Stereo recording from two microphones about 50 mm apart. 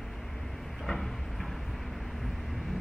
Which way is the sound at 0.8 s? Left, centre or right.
Centre.